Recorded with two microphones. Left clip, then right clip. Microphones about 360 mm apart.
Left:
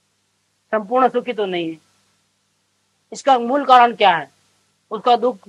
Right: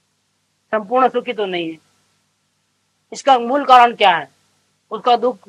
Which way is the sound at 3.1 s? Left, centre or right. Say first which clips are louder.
Right 2 dB; left.